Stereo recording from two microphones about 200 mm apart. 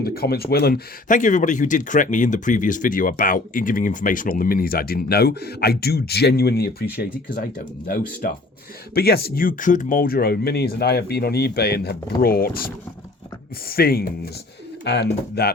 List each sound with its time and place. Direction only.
0.0 s speech: 50° left (ahead or behind)